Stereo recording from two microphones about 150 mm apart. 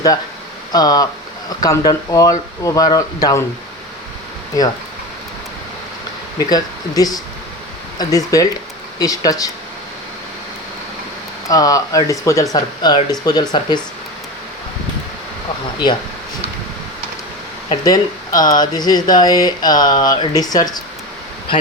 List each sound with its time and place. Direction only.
0.7 s speech: 25° left (ahead or behind)
6.4 s speech: 25° left (ahead or behind)
11.4 s speech: 25° left (ahead or behind)
17.8 s speech: 25° left (ahead or behind)